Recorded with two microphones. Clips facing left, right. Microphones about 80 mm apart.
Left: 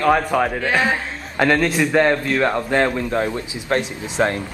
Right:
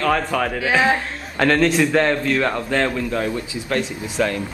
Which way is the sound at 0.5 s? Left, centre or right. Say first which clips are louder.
Right 1 dB; centre.